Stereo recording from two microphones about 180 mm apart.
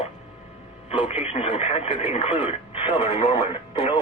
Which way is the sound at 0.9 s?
35° left (ahead or behind).